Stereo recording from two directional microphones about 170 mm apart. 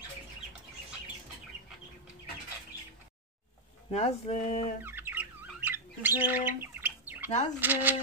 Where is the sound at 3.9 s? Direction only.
40° left (ahead or behind).